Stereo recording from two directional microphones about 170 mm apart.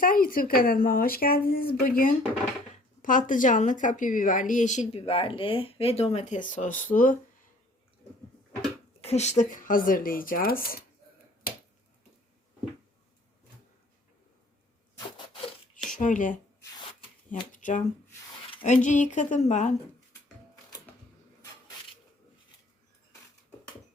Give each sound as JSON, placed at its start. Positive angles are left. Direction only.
{"t": 0.0, "sound": "a woman's voice", "side_deg": 55}
{"t": 9.0, "sound": "speech", "side_deg": 40}
{"t": 11.5, "sound": "finger snapping", "side_deg": 55}
{"t": 15.9, "sound": "speech", "side_deg": 50}
{"t": 17.5, "sound": "a woman's voice", "side_deg": 50}
{"t": 20.9, "sound": "a sound", "side_deg": 10}